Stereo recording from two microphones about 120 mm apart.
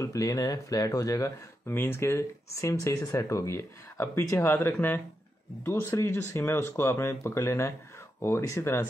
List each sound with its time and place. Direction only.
0.0 s speech: 30° left (ahead or behind)